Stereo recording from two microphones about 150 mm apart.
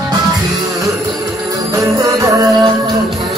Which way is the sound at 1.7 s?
20° right (ahead or behind).